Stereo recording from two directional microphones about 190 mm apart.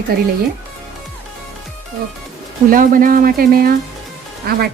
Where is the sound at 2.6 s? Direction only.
45° right (ahead or behind).